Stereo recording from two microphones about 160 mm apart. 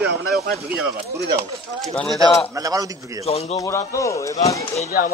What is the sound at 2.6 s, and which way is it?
Speech, 20° right (ahead or behind).